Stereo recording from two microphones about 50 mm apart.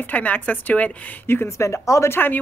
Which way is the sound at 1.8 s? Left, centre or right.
Left.